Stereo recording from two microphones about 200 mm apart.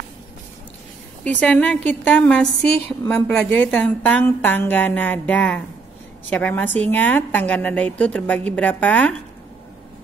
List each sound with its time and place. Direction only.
1.4 s a woman's voice: 5° left (ahead or behind)